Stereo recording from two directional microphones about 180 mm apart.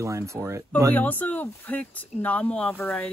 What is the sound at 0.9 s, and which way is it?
Speech, 10° left (ahead or behind).